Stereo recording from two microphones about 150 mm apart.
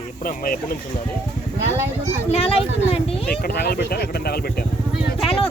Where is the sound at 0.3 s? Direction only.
70° left (ahead or behind).